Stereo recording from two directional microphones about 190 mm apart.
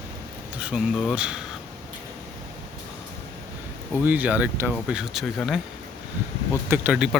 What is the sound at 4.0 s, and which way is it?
Speech, 10° right (ahead or behind).